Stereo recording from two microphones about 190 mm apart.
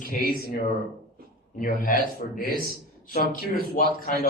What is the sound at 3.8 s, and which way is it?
Speech, 50° left (ahead or behind).